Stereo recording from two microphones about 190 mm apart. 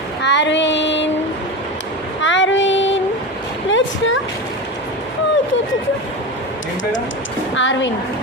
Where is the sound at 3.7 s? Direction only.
85° left.